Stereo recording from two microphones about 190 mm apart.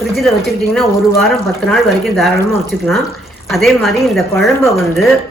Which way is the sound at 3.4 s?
Centre (ahead or behind).